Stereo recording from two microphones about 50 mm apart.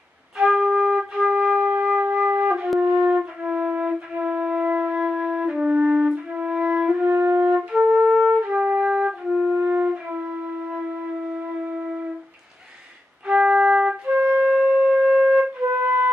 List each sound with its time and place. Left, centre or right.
0.4 s flute: centre
2.2 s music: right
2.8 s flute: right
7.1 s wind instrument: right
7.9 s music: centre
8.5 s flute: right
13.3 s flute: centre
15.8 s music: right